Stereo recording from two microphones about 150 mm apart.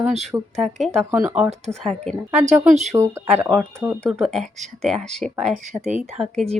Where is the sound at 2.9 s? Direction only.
15° right (ahead or behind).